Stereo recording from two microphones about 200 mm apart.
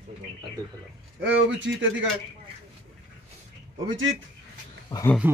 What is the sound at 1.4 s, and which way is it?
Speech, 65° right (ahead or behind).